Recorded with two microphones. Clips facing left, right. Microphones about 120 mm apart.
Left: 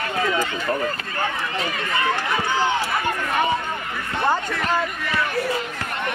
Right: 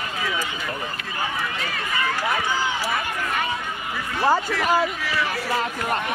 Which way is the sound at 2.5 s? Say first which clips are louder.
Left 4 dB; 60° left (ahead or behind).